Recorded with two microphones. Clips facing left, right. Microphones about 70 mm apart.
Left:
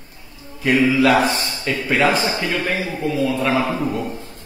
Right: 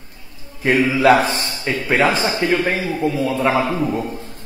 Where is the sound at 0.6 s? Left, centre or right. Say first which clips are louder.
Right 1 dB; right.